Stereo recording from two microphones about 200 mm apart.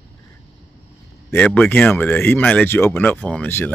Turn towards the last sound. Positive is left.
turn(degrees=10)  # may be behind; listen again after turning